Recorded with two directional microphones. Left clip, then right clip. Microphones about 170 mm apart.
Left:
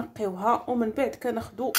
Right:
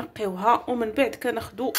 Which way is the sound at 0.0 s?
15° left (ahead or behind).